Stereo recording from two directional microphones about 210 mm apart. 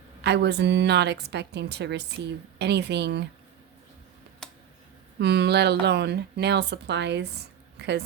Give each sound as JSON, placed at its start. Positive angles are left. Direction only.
{"t": 0.2, "sound": "a woman's voice", "side_deg": -55}
{"t": 4.4, "sound": "a sound", "side_deg": 5}
{"t": 5.2, "sound": "a woman's voice", "side_deg": -50}